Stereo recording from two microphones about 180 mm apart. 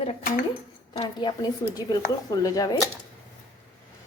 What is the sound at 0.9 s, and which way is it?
Speech, 25° left (ahead or behind).